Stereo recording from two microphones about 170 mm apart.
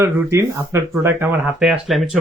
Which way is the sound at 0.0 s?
15° right (ahead or behind).